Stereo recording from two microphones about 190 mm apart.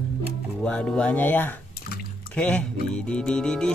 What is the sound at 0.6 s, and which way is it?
Speech, 5° left (ahead or behind).